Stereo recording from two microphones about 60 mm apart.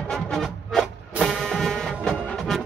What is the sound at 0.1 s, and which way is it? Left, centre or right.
Music, centre.